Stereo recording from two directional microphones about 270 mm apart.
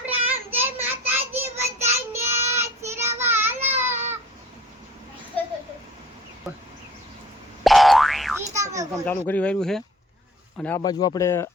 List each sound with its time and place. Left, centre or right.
0.3 s child singing: centre
3.8 s a sound: centre
7.6 s boing: centre
8.5 s children playing: centre
8.9 s speech: centre